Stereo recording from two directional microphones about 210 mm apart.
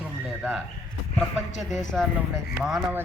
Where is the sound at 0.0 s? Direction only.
5° right (ahead or behind).